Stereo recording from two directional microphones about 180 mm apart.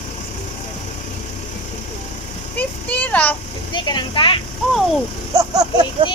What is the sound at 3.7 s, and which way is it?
Speech, 25° left (ahead or behind).